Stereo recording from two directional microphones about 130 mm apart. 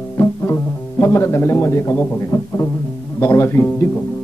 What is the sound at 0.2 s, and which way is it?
Speech, 20° left (ahead or behind).